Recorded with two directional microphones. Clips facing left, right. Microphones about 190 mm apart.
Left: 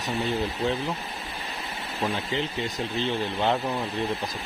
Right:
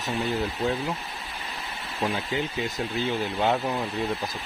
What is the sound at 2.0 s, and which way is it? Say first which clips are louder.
Speech: right 1 dB; 5° right (ahead or behind).